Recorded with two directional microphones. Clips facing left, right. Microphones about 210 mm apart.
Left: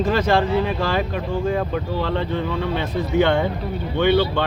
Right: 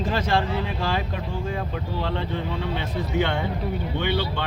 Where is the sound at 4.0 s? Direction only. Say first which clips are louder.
Left 11 dB; 65° left (ahead or behind).